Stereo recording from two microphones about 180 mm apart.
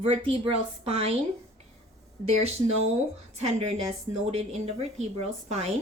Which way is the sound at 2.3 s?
35° right (ahead or behind).